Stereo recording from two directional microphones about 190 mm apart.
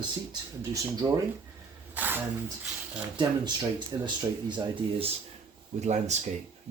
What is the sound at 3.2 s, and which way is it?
Speech, 20° right (ahead or behind).